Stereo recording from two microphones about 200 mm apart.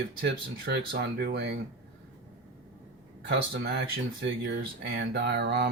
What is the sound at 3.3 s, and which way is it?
Speech, 55° right (ahead or behind).